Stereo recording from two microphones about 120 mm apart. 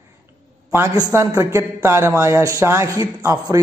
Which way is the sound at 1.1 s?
25° right (ahead or behind).